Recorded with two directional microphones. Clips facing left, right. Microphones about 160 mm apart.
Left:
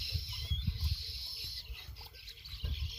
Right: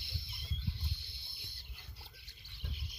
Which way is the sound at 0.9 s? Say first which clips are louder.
Left 1 dB; 90° left.